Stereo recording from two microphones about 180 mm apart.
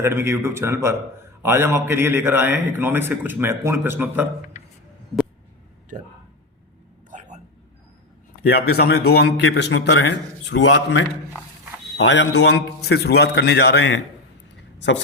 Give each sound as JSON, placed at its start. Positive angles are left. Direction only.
{"t": 0.0, "sound": "a man's voice", "side_deg": -15}
{"t": 8.4, "sound": "a man's voice", "side_deg": 60}